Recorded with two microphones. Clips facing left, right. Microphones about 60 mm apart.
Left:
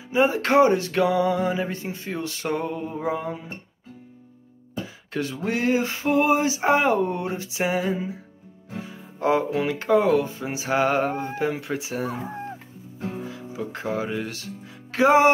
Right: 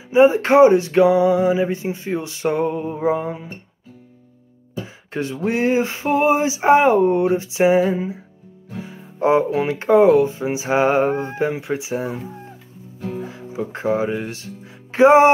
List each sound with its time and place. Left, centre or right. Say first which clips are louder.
0.1 s speech: right 7 dB; right
5.1 s speech: right 4 dB; right
13.2 s speech: right 4 dB; right